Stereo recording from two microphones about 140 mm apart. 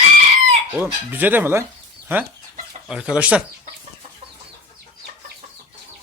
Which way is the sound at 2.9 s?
5° right (ahead or behind).